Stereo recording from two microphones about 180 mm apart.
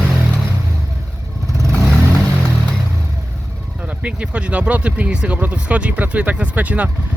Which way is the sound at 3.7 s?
5° right (ahead or behind).